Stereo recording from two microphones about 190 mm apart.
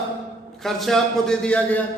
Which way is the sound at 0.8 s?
5° left (ahead or behind).